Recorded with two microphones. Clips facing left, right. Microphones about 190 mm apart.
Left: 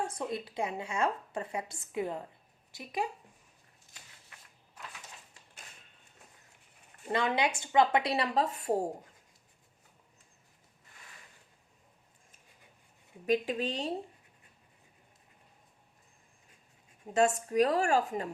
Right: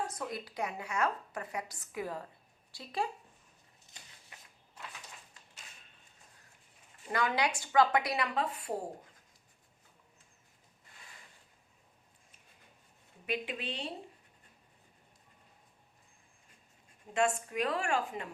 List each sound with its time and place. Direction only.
0.0 s a woman's voice: 25° left (ahead or behind)
7.1 s a woman's voice: 25° left (ahead or behind); by 8.7 s 40° left (ahead or behind)
13.2 s a woman's voice: 40° left (ahead or behind)
17.2 s a woman's voice: 40° left (ahead or behind)